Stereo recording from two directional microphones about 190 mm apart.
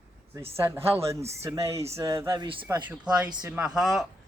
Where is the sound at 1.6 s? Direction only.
35° right (ahead or behind).